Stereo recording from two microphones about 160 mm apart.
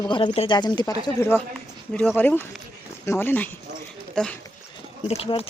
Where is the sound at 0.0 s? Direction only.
30° left (ahead or behind).